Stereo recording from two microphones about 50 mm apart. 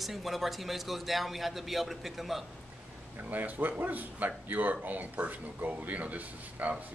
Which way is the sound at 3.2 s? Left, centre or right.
Right.